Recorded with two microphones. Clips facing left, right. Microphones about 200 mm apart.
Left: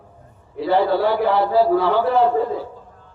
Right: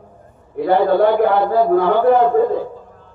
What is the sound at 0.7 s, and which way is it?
A man's voice, 50° right (ahead or behind).